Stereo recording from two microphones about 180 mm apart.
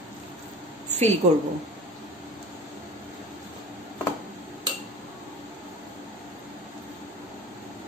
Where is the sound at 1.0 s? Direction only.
35° right (ahead or behind).